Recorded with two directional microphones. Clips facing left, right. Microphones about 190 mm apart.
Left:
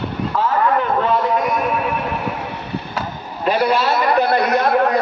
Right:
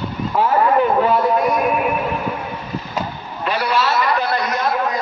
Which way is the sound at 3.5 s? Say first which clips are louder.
Left 3 dB; 50° left (ahead or behind).